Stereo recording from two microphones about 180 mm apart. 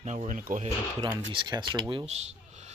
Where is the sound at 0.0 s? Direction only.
40° right (ahead or behind).